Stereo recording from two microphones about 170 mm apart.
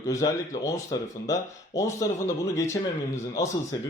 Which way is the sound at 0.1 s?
20° left (ahead or behind).